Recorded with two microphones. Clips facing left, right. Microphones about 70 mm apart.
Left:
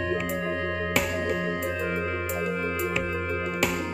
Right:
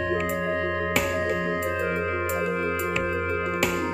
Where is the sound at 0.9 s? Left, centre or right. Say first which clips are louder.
Even; centre.